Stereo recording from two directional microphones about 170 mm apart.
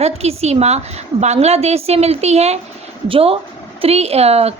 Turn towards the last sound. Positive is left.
turn(degrees=-35)  # may be behind; listen again after turning